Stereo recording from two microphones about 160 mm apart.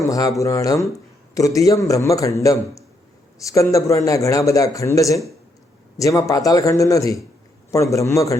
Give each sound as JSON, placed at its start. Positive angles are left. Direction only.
{"t": 0.0, "sound": "a man's voice", "side_deg": 20}